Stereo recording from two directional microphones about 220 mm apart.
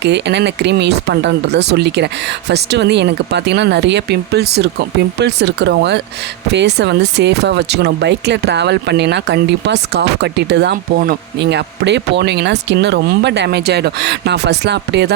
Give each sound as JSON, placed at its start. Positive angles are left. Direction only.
{"t": 0.0, "sound": "speech", "side_deg": -50}